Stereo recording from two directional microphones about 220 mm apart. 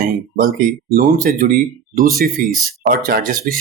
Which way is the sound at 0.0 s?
40° right (ahead or behind).